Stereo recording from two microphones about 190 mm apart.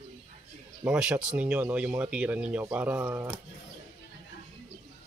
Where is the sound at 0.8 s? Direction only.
5° right (ahead or behind).